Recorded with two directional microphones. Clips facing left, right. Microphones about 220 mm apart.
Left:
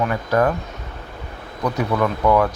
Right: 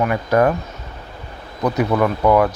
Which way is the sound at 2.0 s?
10° right (ahead or behind).